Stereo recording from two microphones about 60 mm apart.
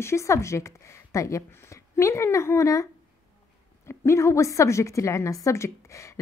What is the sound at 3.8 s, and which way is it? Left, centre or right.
Speech, left.